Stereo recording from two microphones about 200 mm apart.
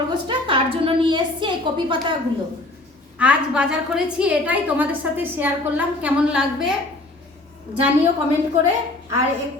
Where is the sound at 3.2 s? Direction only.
5° right (ahead or behind).